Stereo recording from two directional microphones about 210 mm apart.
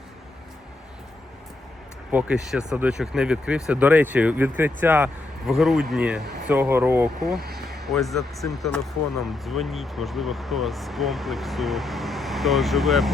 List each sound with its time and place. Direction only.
2.1 s speech: 5° right (ahead or behind)
7.3 s a sound: 45° right (ahead or behind)
7.7 s speech: centre (ahead or behind)